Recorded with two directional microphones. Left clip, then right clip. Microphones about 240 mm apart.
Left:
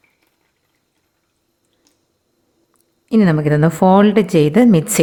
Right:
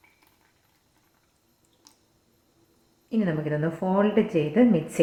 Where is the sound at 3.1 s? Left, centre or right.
Left.